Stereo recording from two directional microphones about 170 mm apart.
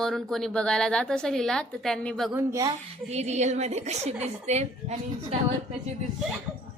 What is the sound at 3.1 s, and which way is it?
A woman's voice, 40° right (ahead or behind).